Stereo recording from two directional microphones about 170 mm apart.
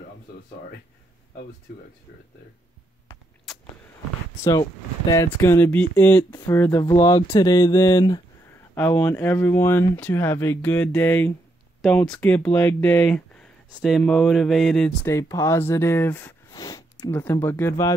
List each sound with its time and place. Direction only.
4.5 s speech: 20° left (ahead or behind)
8.7 s speech: 10° left (ahead or behind)
15.0 s speech: 20° left (ahead or behind)